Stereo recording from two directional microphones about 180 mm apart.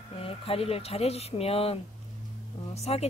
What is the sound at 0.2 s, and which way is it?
Speech, 30° left (ahead or behind).